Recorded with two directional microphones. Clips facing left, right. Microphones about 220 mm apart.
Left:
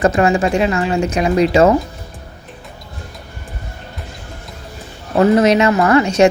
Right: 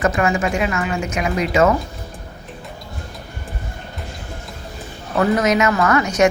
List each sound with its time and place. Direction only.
0.0 s speech: 30° left (ahead or behind)
5.1 s speech: 30° left (ahead or behind)